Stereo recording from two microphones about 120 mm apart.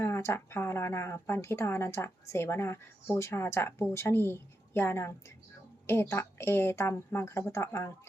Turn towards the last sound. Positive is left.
turn(degrees=20)  # may be behind; listen again after turning